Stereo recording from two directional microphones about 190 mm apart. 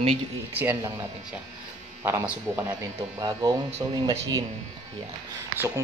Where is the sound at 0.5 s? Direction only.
10° right (ahead or behind).